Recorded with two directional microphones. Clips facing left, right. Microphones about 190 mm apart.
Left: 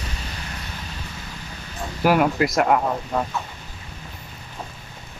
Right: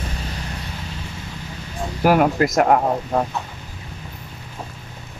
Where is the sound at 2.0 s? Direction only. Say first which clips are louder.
Right 2 dB; 45° right (ahead or behind).